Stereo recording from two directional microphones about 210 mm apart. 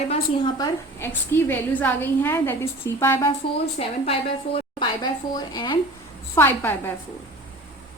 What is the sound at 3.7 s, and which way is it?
A woman's voice, 25° left (ahead or behind).